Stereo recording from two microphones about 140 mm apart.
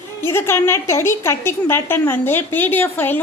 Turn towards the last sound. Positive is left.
turn(degrees=15)  # may be behind; listen again after turning